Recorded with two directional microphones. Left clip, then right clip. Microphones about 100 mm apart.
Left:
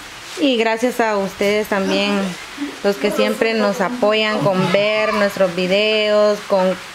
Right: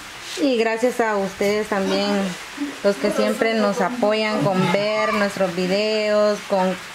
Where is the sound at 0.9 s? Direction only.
30° left (ahead or behind).